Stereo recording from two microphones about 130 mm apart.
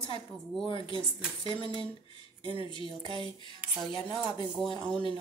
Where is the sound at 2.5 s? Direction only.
40° left (ahead or behind).